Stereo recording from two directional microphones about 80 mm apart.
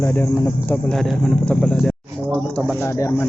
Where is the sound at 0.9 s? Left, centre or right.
Centre.